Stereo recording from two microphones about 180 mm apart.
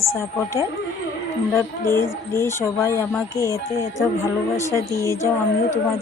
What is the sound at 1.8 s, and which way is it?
A woman's voice, 15° left (ahead or behind).